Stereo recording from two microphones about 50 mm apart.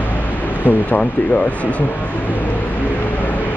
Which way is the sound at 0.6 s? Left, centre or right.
Left.